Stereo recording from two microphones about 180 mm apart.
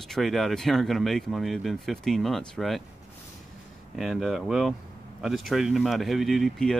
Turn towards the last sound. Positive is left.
turn(degrees=0)  # may be behind; listen again after turning